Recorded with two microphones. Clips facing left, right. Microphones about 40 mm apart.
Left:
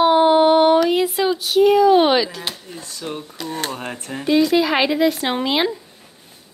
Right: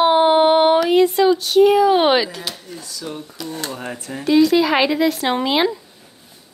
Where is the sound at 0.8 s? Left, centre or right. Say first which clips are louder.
Right 3 dB; centre.